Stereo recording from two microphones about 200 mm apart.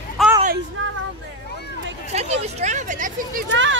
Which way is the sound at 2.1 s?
35° right (ahead or behind).